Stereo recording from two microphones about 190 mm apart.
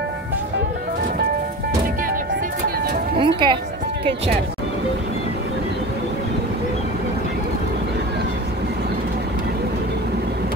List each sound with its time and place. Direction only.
3.2 s speech: 25° right (ahead or behind)